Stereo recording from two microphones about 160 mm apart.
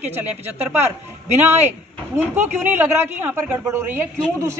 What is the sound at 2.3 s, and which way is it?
A man's voice, 10° right (ahead or behind).